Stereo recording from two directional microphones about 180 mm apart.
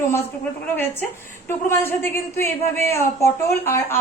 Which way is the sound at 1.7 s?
15° left (ahead or behind).